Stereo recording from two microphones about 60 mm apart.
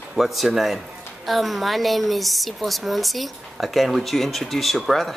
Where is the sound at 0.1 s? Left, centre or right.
Centre.